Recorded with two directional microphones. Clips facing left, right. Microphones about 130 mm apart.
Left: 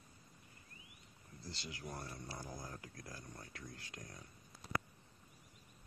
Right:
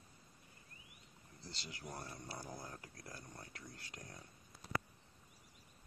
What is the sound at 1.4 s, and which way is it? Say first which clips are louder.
Speech: left 2 dB; 25° right (ahead or behind).